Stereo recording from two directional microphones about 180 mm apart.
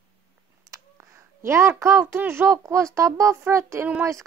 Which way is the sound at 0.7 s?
15° right (ahead or behind).